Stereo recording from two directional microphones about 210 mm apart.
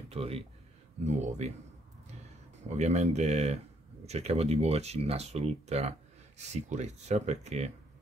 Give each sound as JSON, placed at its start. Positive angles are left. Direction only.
{"t": 0.1, "sound": "speech", "side_deg": -30}
{"t": 2.7, "sound": "speech", "side_deg": -35}